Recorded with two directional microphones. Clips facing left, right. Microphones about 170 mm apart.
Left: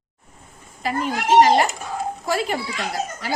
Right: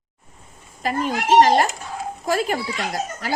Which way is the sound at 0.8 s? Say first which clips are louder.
Right 1 dB; 45° right (ahead or behind).